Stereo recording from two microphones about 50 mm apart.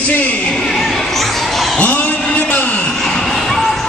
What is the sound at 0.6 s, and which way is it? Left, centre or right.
Speech, centre.